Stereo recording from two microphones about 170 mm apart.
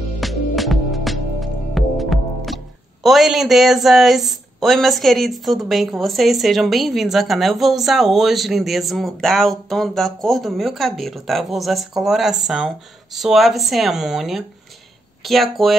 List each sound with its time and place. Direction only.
0.2 s music: centre (ahead or behind)
15.2 s speech: centre (ahead or behind)